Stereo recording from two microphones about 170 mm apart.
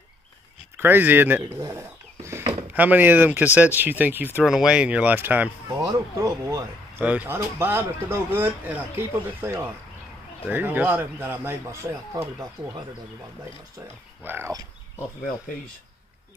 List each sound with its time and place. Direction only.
0.7 s speech: 10° right (ahead or behind)
5.7 s speech: 20° right (ahead or behind)
14.2 s speech: 15° right (ahead or behind)